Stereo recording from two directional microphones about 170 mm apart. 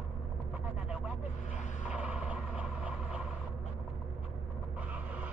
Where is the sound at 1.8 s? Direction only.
10° right (ahead or behind).